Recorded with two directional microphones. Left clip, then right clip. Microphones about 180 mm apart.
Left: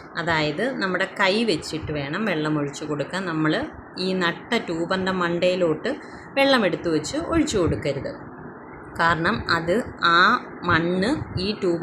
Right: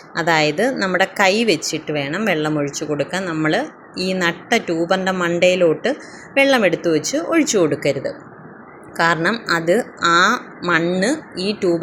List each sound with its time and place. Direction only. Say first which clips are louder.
0.1 s a woman's voice: right 7 dB; 25° right (ahead or behind)